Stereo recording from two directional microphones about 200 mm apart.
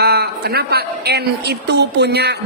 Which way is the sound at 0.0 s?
50° right (ahead or behind).